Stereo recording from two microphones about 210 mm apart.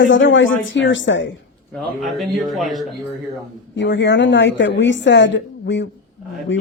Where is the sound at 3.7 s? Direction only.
60° left (ahead or behind).